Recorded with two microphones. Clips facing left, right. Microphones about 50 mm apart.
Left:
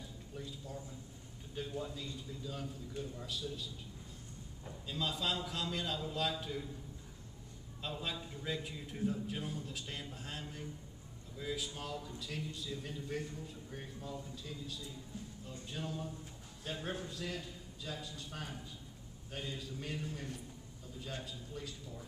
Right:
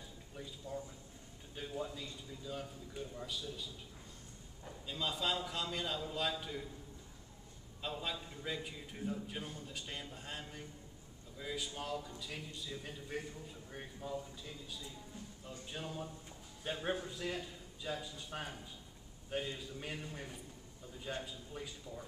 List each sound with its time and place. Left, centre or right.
0.4 s a man's voice: centre
4.8 s a man's voice: centre
7.8 s a man's voice: centre